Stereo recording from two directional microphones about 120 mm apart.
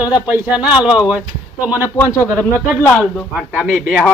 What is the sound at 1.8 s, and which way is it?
Speech, 25° left (ahead or behind).